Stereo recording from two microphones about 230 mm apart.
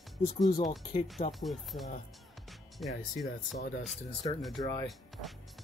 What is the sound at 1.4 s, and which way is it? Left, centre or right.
Speech, centre.